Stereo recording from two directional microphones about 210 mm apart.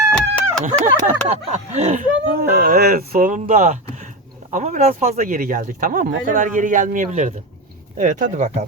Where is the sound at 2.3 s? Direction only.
45° right (ahead or behind).